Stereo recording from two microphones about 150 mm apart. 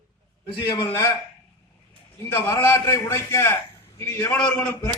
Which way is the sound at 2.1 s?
15° left (ahead or behind).